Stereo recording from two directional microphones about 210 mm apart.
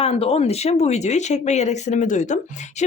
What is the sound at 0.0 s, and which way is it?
Speech, 25° left (ahead or behind).